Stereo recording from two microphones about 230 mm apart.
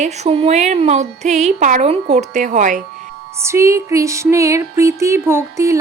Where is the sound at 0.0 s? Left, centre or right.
Right.